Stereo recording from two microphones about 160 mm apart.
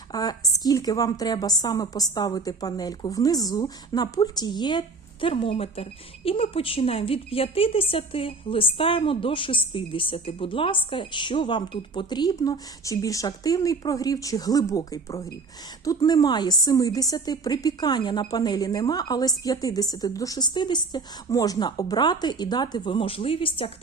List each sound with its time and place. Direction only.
0.1 s a woman's voice: 25° left (ahead or behind)